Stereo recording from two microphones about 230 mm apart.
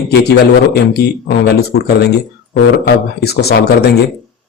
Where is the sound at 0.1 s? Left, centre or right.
Left.